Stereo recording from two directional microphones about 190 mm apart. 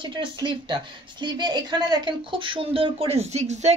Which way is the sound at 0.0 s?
25° right (ahead or behind).